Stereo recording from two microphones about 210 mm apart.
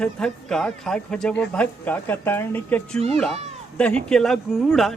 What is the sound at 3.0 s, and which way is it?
Speech, 30° right (ahead or behind).